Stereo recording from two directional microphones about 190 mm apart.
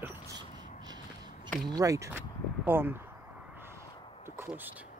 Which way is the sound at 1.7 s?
15° right (ahead or behind).